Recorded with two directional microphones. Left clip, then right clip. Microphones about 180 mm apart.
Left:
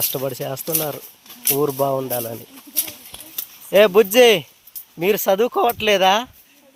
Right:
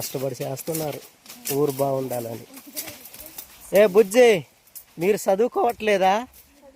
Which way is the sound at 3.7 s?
10° left (ahead or behind).